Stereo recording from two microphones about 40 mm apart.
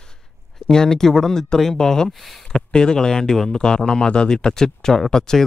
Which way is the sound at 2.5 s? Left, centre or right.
Centre.